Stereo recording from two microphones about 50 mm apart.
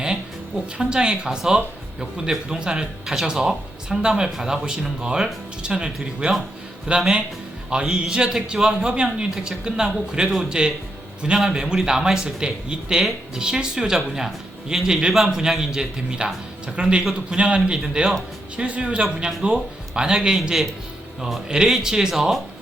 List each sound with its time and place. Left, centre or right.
0.8 s a man's voice: centre